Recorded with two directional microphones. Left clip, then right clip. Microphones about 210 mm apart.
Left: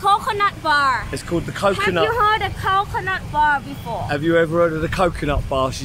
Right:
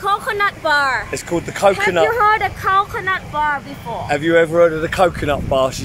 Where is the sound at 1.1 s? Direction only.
10° right (ahead or behind).